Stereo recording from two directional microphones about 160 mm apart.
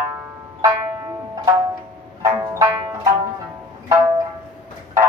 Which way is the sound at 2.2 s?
20° right (ahead or behind).